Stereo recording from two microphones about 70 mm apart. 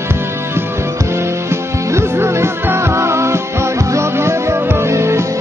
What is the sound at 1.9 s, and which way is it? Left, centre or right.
Music, right.